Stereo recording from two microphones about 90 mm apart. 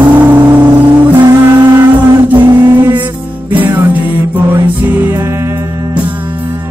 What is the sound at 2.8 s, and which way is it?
Music, 20° right (ahead or behind).